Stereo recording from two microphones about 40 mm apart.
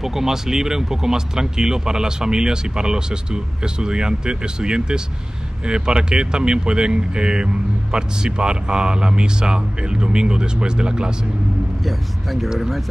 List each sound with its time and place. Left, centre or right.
0.0 s speech: centre
11.8 s speech: centre